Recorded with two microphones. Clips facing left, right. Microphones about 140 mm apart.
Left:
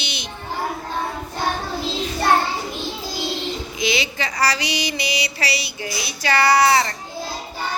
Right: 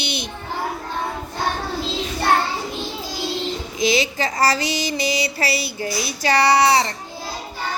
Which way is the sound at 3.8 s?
40° right (ahead or behind).